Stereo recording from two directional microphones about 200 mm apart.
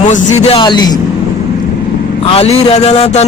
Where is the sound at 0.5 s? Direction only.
20° left (ahead or behind).